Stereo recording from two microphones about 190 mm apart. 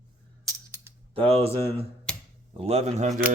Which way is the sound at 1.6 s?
10° left (ahead or behind).